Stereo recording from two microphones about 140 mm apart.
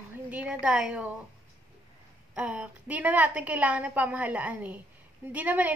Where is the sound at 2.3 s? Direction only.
10° right (ahead or behind).